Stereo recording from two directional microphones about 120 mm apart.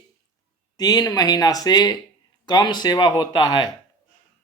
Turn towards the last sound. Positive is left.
turn(degrees=35)  # may be behind; listen again after turning